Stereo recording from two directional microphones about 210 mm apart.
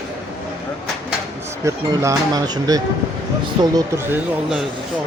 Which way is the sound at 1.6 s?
15° right (ahead or behind).